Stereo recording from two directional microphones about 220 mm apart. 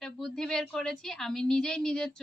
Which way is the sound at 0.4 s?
Centre (ahead or behind).